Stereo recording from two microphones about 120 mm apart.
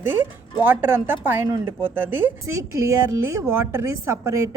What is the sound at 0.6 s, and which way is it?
Speech, 15° right (ahead or behind).